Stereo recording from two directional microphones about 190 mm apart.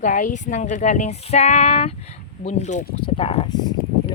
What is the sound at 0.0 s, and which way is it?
Speech, 45° left (ahead or behind).